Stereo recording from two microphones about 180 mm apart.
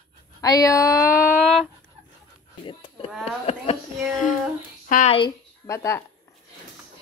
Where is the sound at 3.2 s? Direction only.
35° left (ahead or behind).